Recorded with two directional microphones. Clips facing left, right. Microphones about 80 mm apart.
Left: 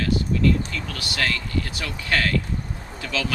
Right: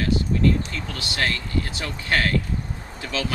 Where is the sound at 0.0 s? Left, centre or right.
Right.